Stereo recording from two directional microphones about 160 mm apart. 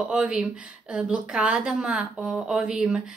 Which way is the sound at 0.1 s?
5° right (ahead or behind).